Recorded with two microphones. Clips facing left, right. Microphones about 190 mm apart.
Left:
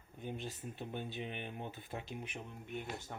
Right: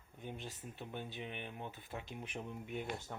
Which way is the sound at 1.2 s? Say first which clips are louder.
Left 2 dB; 30° left (ahead or behind).